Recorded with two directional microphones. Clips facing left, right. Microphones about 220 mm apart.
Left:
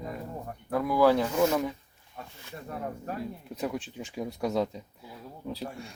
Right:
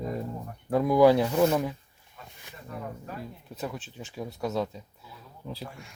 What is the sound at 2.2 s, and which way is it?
Snake, 55° left (ahead or behind).